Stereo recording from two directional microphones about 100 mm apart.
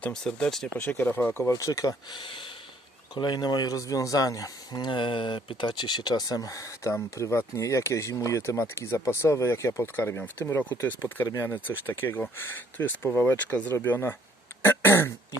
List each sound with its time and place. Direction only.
0.1 s speech: 5° left (ahead or behind)
0.8 s speech: 20° left (ahead or behind)
2.1 s speech: 55° left (ahead or behind); by 15.1 s 25° left (ahead or behind)